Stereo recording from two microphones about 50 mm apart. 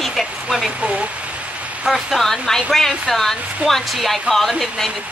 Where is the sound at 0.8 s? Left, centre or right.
Right.